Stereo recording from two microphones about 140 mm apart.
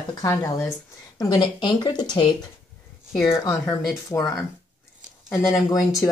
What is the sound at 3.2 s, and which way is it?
Speech, 20° left (ahead or behind).